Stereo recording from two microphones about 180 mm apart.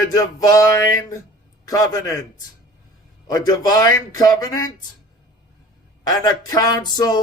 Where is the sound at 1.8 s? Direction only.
20° left (ahead or behind).